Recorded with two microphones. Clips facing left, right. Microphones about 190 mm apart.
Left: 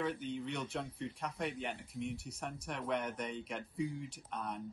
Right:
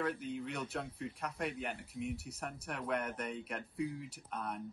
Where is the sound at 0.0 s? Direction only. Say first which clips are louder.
Even; 5° right (ahead or behind).